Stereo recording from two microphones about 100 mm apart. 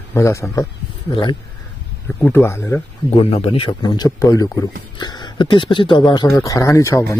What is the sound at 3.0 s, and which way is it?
Speech, 85° left.